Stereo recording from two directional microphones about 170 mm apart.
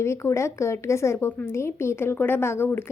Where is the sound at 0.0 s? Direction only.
15° left (ahead or behind).